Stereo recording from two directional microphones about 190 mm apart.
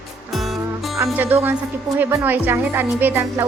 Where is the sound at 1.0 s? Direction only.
10° right (ahead or behind).